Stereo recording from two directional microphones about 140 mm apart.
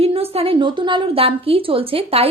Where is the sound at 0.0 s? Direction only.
45° right (ahead or behind).